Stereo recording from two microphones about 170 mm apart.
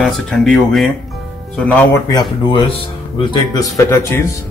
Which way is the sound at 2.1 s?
25° left (ahead or behind).